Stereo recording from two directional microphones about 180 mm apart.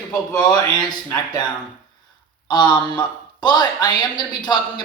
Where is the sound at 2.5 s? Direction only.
25° left (ahead or behind).